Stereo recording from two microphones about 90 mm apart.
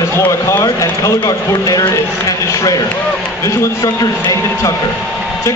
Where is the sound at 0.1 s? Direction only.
30° left (ahead or behind).